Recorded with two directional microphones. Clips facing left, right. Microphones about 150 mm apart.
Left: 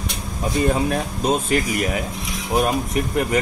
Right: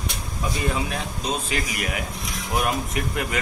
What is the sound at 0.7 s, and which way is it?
Speech, 40° left (ahead or behind).